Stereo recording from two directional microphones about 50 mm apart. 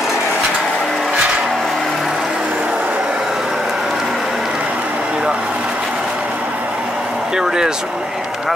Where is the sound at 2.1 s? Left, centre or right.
Centre.